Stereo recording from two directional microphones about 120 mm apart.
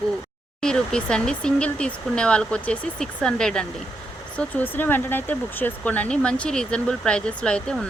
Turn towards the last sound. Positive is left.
turn(degrees=5)  # may be behind; listen again after turning